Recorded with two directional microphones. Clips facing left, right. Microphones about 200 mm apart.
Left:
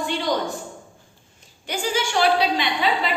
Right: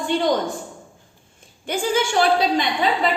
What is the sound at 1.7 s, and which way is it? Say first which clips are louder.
A woman's voice: right 4 dB; 50° right (ahead or behind).